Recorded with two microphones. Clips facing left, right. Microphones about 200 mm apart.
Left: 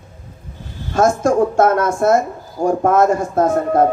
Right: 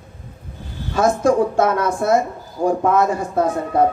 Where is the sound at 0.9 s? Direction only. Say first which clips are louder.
Left 1 dB; 45° left (ahead or behind).